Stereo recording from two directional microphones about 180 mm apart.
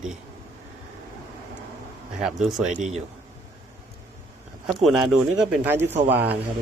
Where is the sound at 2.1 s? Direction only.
5° right (ahead or behind).